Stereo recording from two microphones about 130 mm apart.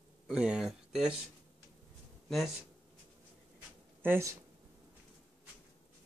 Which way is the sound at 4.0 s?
20° right (ahead or behind).